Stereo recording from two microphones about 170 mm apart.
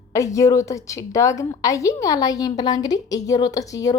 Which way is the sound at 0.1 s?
20° left (ahead or behind).